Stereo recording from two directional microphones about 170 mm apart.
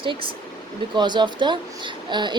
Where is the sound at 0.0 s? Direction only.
30° right (ahead or behind).